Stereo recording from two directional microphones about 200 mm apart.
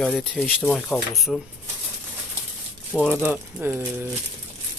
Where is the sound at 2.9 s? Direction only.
5° left (ahead or behind).